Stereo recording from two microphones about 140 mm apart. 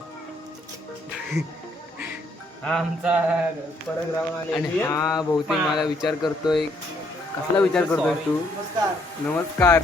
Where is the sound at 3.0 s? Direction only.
10° right (ahead or behind).